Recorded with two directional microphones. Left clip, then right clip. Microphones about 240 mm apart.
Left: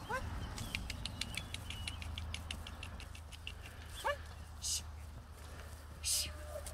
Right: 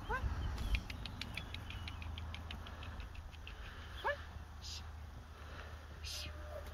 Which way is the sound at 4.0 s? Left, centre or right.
Left.